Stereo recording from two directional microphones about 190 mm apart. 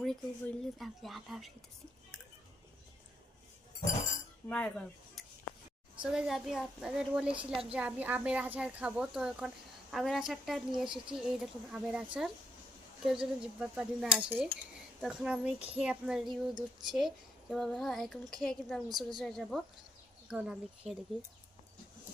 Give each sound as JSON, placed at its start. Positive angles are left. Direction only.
{"t": 0.0, "sound": "a woman's voice", "side_deg": 0}
{"t": 4.4, "sound": "a woman's voice", "side_deg": 5}
{"t": 7.3, "sound": "a woman's voice", "side_deg": -30}
{"t": 7.7, "sound": "a woman's voice", "side_deg": -5}
{"t": 18.9, "sound": "a woman's voice", "side_deg": -20}
{"t": 19.2, "sound": "a woman's voice", "side_deg": 0}